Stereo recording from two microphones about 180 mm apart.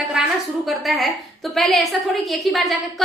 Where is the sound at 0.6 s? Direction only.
Centre (ahead or behind).